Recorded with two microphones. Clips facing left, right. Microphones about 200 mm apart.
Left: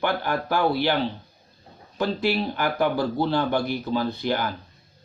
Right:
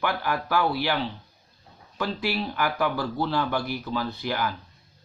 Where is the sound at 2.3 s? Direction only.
30° left (ahead or behind).